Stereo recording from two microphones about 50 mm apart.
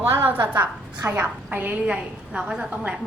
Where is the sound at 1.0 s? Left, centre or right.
Right.